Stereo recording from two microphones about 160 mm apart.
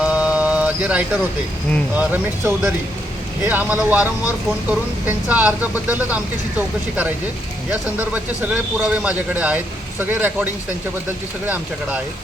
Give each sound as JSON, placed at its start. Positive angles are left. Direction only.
{"t": 0.0, "sound": "rain on surface", "side_deg": -5}
{"t": 2.0, "sound": "speech", "side_deg": -10}
{"t": 7.7, "sound": "speech", "side_deg": -10}